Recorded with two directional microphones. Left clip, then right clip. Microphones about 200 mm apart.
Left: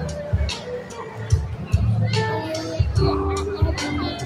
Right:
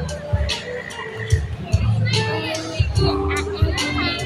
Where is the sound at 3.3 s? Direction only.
15° left (ahead or behind).